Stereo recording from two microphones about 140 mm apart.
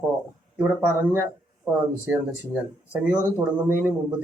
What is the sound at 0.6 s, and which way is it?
Speech, 15° right (ahead or behind).